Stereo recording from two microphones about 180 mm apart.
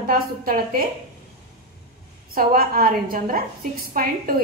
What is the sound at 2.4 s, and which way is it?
A woman's voice, 55° right (ahead or behind).